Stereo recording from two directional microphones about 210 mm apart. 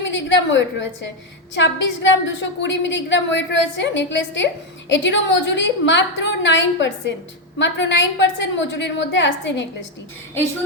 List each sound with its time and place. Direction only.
0.0 s a woman's voice: 60° left (ahead or behind)